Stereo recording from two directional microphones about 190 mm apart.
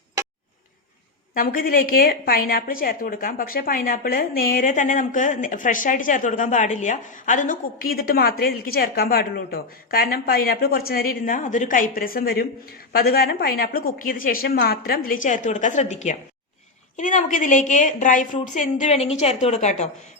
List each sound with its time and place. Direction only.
1.3 s a woman's voice: 50° left (ahead or behind)